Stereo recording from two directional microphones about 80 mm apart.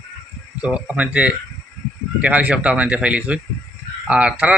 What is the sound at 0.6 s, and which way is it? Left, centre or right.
A man's voice, centre.